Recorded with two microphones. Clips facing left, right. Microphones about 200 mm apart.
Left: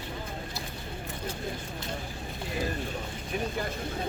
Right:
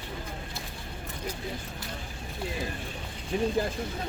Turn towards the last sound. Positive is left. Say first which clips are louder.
# right 4 dB
turn(degrees=-30)  # may be behind; listen again after turning